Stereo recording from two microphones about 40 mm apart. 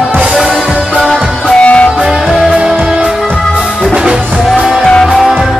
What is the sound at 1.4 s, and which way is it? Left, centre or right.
Music, left.